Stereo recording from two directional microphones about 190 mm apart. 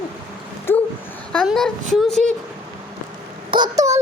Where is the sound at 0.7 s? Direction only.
10° left (ahead or behind).